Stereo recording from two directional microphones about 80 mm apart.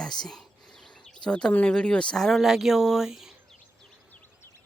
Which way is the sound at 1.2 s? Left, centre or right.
Centre.